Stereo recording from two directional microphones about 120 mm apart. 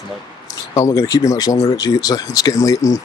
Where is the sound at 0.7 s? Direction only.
25° left (ahead or behind).